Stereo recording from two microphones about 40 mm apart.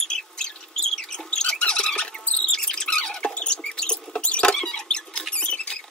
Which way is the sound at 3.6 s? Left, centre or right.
Left.